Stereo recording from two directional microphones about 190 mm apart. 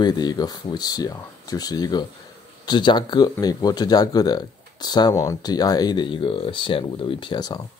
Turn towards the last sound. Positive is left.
turn(degrees=20)  # may be behind; listen again after turning